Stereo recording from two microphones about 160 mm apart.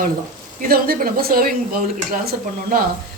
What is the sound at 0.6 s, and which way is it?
Speech, 65° right (ahead or behind).